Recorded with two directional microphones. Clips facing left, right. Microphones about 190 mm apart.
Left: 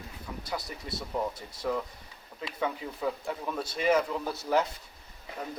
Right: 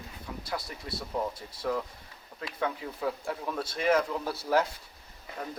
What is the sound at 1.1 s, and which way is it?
Speech, 5° left (ahead or behind).